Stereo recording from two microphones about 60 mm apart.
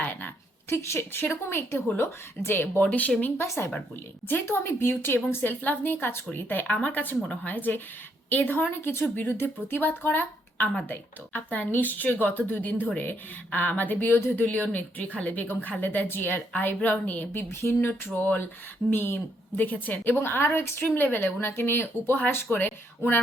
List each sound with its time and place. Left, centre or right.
0.0 s a sound: left
0.7 s a woman's voice: left
2.8 s a woman's voice: left
3.4 s a woman's voice: left
17.5 s speech: left
18.1 s a woman's voice: left